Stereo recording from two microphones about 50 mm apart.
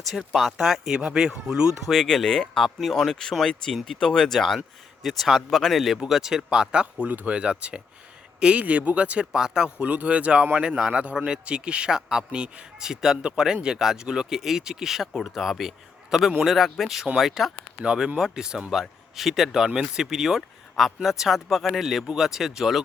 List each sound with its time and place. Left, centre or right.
0.5 s speech: centre
1.9 s speech: centre
2.6 s speech: centre
9.8 s speech: right
10.6 s speech: centre
11.0 s speech: right; by 17.5 s centre
17.8 s speech: centre